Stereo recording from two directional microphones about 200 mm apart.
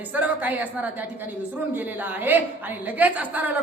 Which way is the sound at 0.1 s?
10° right (ahead or behind).